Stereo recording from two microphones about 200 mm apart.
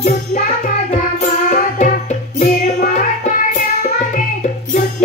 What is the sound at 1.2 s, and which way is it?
Music, 40° left (ahead or behind).